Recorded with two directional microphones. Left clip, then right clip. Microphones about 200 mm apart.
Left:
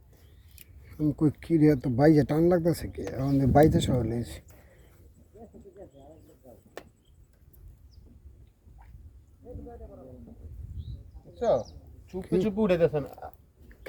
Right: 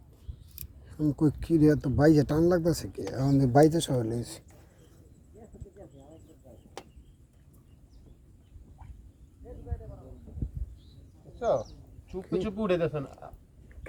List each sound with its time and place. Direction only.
1.0 s speech: 10° right (ahead or behind)
11.3 s speech: 55° left (ahead or behind)